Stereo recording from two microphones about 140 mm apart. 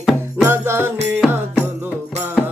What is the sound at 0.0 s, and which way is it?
Music, centre (ahead or behind).